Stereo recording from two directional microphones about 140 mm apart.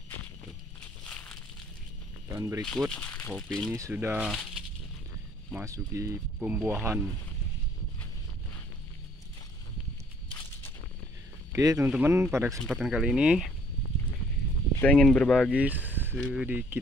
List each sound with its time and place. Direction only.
1.0 s a sound: 5° left (ahead or behind)
2.3 s speech: 25° right (ahead or behind)
2.6 s speech: centre (ahead or behind)
3.7 s speech: 20° right (ahead or behind)
4.3 s speech: centre (ahead or behind)
5.5 s speech: 20° right (ahead or behind)
11.5 s speech: 20° right (ahead or behind)
12.6 s speech: centre (ahead or behind)
14.8 s speech: 5° left (ahead or behind)
15.5 s speech: 10° right (ahead or behind)